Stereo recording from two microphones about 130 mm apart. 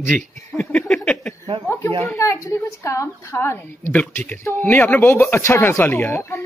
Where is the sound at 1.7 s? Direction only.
20° left (ahead or behind).